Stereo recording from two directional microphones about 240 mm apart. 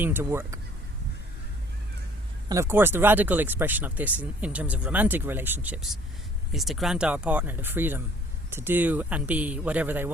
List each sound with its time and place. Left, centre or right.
0.0 s speech: centre
2.5 s speech: centre